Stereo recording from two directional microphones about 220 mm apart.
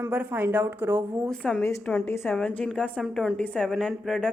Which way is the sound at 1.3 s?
Centre (ahead or behind).